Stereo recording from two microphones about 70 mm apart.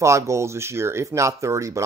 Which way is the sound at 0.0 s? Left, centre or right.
Right.